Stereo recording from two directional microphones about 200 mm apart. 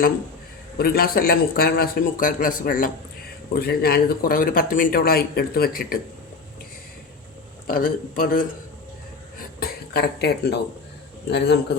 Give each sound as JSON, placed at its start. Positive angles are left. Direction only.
{"t": 0.8, "sound": "speech", "side_deg": 50}
{"t": 7.7, "sound": "speech", "side_deg": 45}
{"t": 9.6, "sound": "a man's voice", "side_deg": 50}